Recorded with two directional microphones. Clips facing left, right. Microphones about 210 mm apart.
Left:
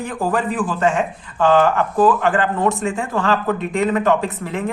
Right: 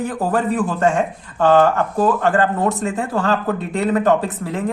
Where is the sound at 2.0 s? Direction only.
40° right (ahead or behind).